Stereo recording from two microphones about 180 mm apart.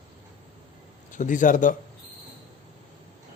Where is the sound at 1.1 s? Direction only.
45° left (ahead or behind).